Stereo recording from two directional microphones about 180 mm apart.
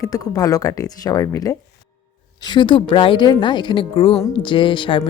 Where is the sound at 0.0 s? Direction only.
20° left (ahead or behind).